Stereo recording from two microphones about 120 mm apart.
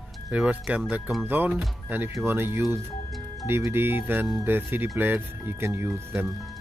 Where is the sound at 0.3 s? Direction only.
10° right (ahead or behind).